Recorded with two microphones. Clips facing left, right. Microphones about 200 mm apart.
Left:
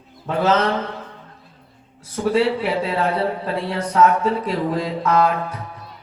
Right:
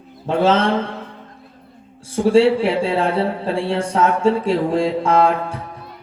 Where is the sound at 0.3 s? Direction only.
30° right (ahead or behind).